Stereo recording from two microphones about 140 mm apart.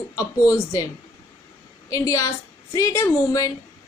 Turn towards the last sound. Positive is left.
turn(degrees=25)  # may be behind; listen again after turning